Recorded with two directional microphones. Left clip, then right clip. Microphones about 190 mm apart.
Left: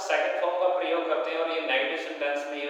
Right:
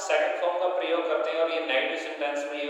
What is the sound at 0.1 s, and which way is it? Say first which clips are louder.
A man's voice: right 1 dB; 25° right (ahead or behind).